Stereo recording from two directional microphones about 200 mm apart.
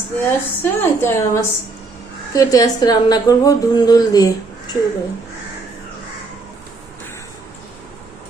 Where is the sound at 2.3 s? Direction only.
15° left (ahead or behind).